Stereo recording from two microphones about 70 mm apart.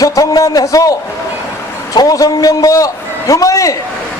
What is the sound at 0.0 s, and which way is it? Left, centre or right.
Speech, left.